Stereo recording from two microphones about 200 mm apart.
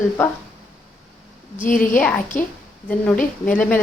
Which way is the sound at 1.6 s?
40° left (ahead or behind).